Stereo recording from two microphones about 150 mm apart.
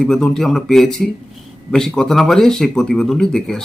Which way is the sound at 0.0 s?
5° left (ahead or behind).